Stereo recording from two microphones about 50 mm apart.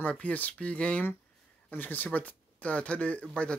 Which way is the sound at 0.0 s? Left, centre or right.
Left.